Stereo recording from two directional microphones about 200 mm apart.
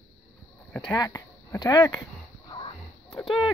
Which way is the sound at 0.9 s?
15° left (ahead or behind).